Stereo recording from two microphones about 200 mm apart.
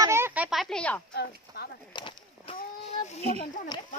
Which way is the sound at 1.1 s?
55° left (ahead or behind).